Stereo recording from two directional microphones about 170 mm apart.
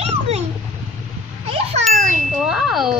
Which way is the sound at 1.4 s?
35° right (ahead or behind).